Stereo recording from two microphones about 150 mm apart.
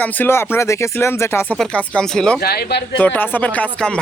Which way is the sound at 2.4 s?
90° left.